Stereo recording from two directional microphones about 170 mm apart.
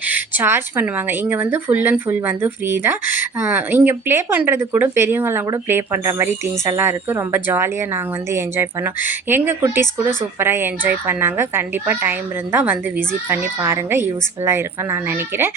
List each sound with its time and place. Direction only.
0.1 s speech: 10° right (ahead or behind)